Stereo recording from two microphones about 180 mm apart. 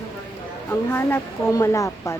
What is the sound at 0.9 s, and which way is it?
Speech, 15° left (ahead or behind).